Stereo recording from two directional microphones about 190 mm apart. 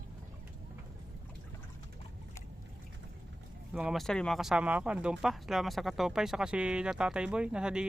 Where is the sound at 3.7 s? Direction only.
5° right (ahead or behind).